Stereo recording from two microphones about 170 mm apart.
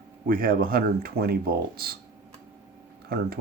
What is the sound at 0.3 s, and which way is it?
Speech, 60° right (ahead or behind).